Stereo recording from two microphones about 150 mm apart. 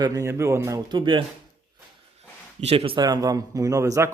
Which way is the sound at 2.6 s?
40° right (ahead or behind).